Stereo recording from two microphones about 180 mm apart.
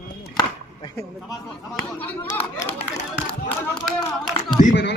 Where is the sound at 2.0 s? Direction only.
10° left (ahead or behind).